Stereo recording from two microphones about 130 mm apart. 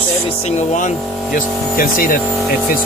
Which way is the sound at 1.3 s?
90° left.